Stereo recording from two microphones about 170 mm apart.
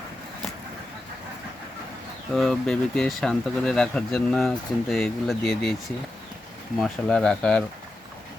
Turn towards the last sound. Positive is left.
turn(degrees=5)  # may be behind; listen again after turning